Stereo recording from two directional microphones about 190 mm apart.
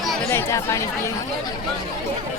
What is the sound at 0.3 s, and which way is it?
Speech, 15° left (ahead or behind).